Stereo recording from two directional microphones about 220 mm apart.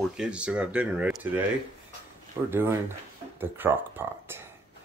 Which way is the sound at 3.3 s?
10° right (ahead or behind).